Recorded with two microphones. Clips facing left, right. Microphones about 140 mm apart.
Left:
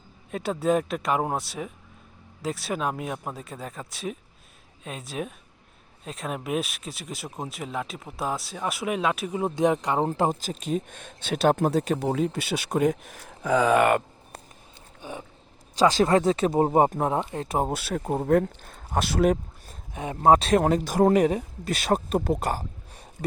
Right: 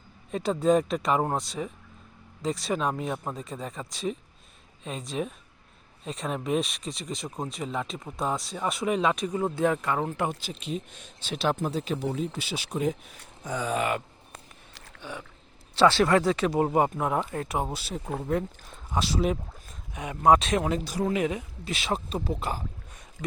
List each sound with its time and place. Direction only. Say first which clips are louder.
0.3 s speech: right 1 dB; 5° left (ahead or behind)
9.4 s speech: left 4 dB; 20° left (ahead or behind); by 11.9 s 50° left (ahead or behind)
11.9 s speech: left 5 dB; 65° left (ahead or behind)
16.0 s speech: left 2 dB; 25° left (ahead or behind)
17.5 s speech: left 6 dB; 45° left (ahead or behind)
17.7 s speech: left 6 dB; 60° left (ahead or behind)
19.9 s speech: left 2 dB; 30° left (ahead or behind)